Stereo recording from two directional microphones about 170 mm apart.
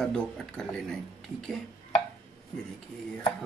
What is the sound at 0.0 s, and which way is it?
Speech, 5° left (ahead or behind).